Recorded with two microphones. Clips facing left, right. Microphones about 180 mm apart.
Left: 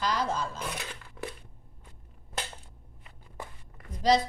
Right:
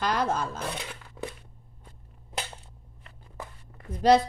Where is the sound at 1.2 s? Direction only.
20° right (ahead or behind).